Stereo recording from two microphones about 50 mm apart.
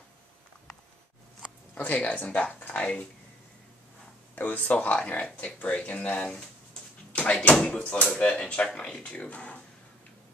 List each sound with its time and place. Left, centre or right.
1.8 s speech: left
4.4 s speech: left